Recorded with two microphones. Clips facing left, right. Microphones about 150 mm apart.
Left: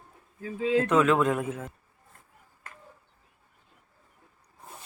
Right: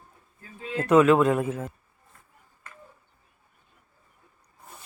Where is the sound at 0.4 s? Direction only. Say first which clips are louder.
Left 10 dB; 90° left.